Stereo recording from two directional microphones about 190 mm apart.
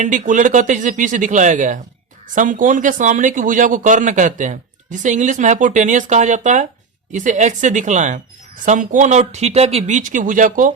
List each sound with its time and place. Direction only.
0.0 s speech: 40° right (ahead or behind)